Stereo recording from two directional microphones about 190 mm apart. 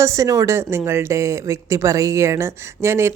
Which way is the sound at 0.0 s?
15° right (ahead or behind).